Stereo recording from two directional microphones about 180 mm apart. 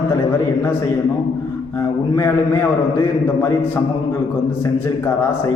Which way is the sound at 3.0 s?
15° left (ahead or behind).